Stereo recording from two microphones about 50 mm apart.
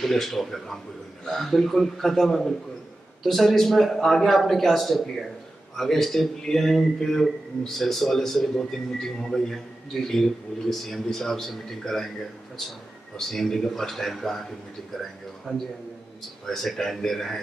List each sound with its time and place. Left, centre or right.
0.0 s a man's voice: centre
13.3 s a man's voice: centre
15.5 s a man's voice: centre